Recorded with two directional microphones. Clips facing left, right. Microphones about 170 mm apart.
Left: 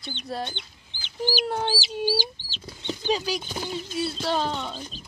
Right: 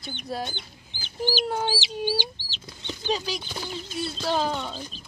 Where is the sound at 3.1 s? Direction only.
5° left (ahead or behind).